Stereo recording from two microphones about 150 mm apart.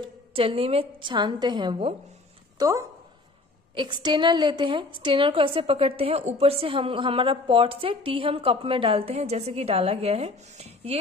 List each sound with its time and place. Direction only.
0.0 s a woman's voice: 40° right (ahead or behind)
2.6 s a woman's voice: 20° right (ahead or behind); by 11.0 s 45° right (ahead or behind)